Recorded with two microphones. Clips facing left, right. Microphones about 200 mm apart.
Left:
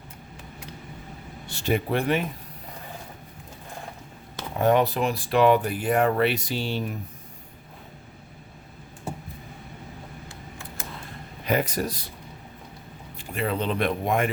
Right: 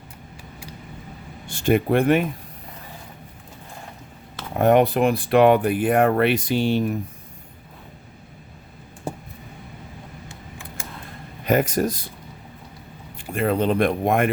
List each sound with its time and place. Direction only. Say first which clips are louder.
1.5 s speech: right 6 dB; 50° right (ahead or behind)
4.5 s speech: right 4 dB; 55° right (ahead or behind)
11.4 s speech: right 5 dB; 45° right (ahead or behind)
13.1 s speech: right 6 dB; 50° right (ahead or behind)